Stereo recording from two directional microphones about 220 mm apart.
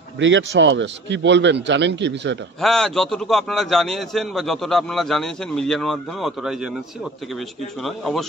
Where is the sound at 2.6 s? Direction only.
Centre (ahead or behind).